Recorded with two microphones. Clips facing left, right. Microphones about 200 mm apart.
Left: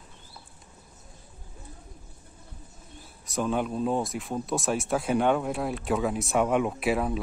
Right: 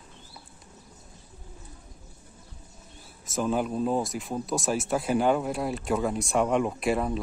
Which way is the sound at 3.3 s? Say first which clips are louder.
Right 1 dB; centre (ahead or behind).